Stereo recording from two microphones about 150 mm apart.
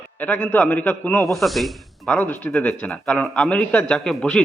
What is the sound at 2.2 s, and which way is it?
A man's voice, 10° left (ahead or behind).